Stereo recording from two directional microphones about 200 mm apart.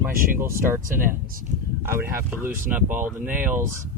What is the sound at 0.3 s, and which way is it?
Speech, 10° right (ahead or behind).